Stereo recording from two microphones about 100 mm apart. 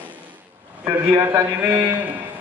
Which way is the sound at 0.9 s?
25° right (ahead or behind).